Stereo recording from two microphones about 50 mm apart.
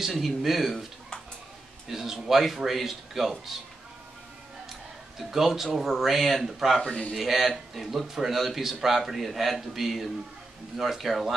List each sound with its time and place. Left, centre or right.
0.0 s a man's voice: centre
1.9 s a man's voice: centre
5.3 s a man's voice: centre
6.8 s speech: centre
7.2 s a man's voice: centre